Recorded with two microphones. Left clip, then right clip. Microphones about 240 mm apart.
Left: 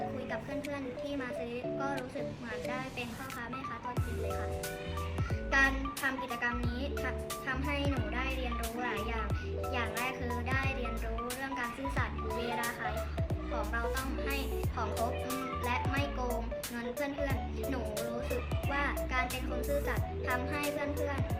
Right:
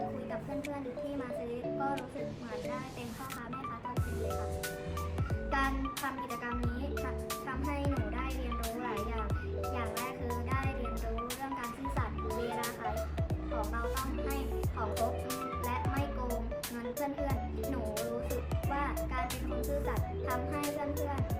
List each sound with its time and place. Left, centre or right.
5.5 s music: centre
6.4 s speech: centre
11.6 s music: centre
13.6 s speech: centre
15.6 s music: centre
18.3 s a child's voice: centre